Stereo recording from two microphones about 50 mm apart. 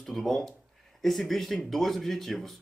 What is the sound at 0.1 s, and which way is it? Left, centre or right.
Speech, centre.